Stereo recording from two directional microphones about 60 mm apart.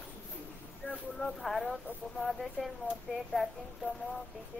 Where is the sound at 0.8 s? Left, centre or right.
Left.